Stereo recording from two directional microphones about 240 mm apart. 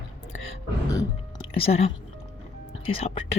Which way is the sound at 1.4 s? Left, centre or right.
Left.